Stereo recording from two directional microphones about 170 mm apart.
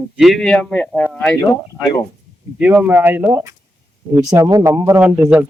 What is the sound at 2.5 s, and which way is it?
Speech, 5° right (ahead or behind).